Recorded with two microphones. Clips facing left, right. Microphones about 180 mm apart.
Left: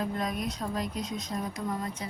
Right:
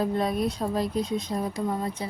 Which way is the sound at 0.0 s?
30° right (ahead or behind).